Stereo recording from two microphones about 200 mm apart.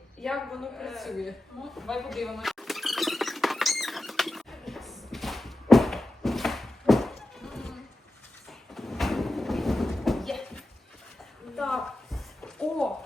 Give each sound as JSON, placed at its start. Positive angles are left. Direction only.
{"t": 0.2, "sound": "a woman's voice", "side_deg": 0}
{"t": 1.7, "sound": "squeal", "side_deg": 0}
{"t": 8.7, "sound": "a sound", "side_deg": 0}